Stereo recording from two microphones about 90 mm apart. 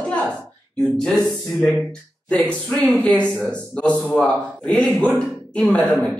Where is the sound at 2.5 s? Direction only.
10° left (ahead or behind).